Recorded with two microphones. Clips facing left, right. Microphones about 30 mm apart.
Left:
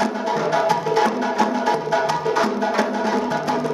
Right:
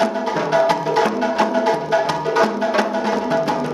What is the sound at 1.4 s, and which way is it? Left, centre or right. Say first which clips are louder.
Music: right 2 dB; centre.